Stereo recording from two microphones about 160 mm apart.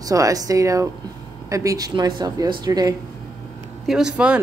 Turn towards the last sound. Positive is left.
turn(degrees=-5)  # may be behind; listen again after turning